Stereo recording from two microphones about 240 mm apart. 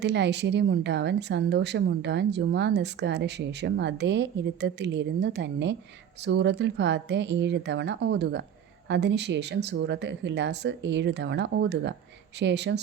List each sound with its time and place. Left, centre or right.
0.0 s a woman's voice: right